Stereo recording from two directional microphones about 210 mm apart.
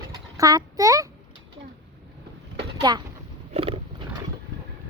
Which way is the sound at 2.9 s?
20° right (ahead or behind).